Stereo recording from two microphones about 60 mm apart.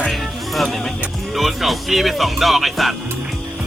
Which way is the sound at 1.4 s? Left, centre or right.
Centre.